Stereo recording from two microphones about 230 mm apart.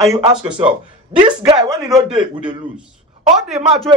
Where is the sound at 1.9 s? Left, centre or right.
Centre.